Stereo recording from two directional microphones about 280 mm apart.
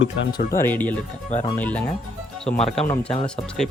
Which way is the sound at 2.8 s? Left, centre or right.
Centre.